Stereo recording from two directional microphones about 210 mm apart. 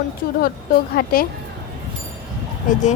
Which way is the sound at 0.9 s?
45° left (ahead or behind).